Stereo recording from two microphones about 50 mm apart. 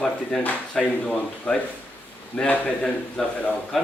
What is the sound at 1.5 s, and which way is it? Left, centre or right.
A man's voice, left.